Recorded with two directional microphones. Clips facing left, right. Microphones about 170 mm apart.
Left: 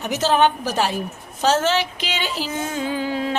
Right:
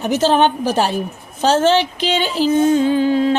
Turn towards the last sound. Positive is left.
turn(degrees=-25)  # may be behind; listen again after turning